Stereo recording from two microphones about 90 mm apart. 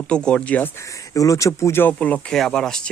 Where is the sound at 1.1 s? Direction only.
40° left (ahead or behind); by 2.2 s 15° left (ahead or behind).